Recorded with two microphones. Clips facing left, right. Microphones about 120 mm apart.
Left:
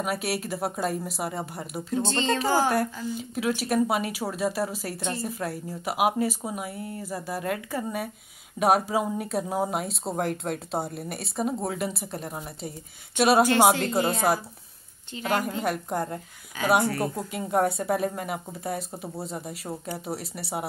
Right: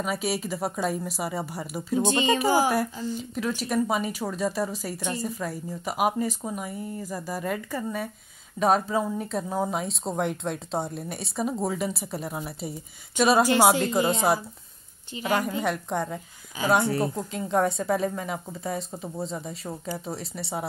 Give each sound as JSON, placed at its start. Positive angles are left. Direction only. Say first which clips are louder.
{"t": 0.0, "sound": "speech", "louder": "right 1 dB", "side_deg": 5}
{"t": 2.0, "sound": "speech", "louder": "right 3 dB", "side_deg": -15}
{"t": 3.1, "sound": "a woman's voice", "louder": "left 1 dB", "side_deg": 5}